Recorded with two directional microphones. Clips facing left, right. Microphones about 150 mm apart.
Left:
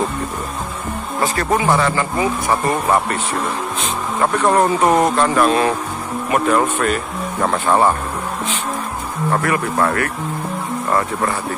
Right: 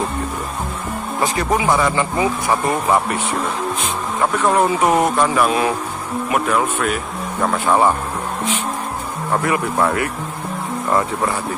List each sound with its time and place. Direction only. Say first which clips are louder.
1.2 s speech: left 1 dB; 15° right (ahead or behind)
4.5 s speech: left 1 dB; 5° right (ahead or behind)
9.4 s speech: right 2 dB; 20° right (ahead or behind)